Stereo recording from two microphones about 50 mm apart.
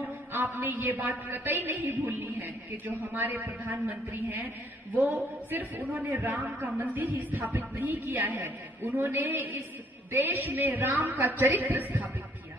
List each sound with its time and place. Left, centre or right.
0.3 s a woman's voice: right
8.4 s a woman's voice: right